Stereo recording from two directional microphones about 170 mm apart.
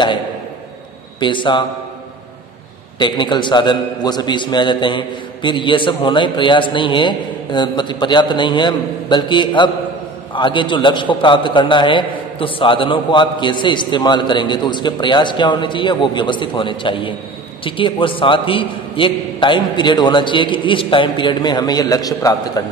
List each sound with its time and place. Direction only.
1.2 s a man's voice: 30° left (ahead or behind)
3.0 s a man's voice: 25° left (ahead or behind)